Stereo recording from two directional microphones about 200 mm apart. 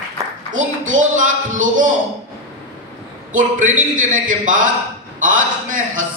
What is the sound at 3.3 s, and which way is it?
A man's voice, 40° right (ahead or behind).